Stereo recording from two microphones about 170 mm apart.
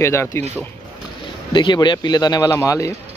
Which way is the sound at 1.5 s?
25° left (ahead or behind).